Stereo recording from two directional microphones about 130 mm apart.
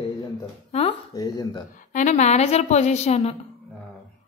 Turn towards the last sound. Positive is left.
turn(degrees=55)  # may be behind; listen again after turning